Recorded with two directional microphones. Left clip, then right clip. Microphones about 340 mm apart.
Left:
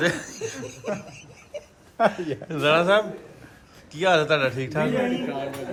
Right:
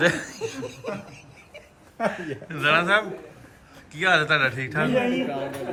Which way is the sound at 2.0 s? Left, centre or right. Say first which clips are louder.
Left 5 dB; left.